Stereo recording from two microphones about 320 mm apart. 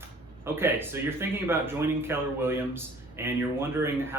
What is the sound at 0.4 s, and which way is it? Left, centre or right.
Speech, centre.